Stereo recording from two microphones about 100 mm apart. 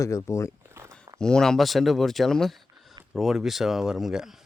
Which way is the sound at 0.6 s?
25° right (ahead or behind).